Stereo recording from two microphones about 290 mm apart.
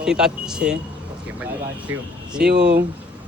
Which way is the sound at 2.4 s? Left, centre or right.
Right.